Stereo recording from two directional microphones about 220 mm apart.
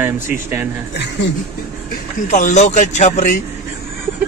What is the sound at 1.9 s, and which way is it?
A man's voice, 35° left (ahead or behind).